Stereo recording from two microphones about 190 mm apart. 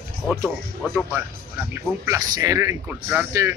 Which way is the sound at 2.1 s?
20° right (ahead or behind).